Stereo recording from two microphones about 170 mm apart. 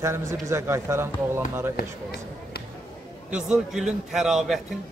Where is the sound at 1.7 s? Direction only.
70° left (ahead or behind).